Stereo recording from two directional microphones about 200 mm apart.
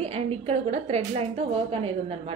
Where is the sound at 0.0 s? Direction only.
30° right (ahead or behind).